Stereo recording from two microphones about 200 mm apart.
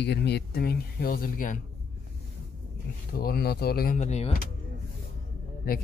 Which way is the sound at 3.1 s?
50° left (ahead or behind).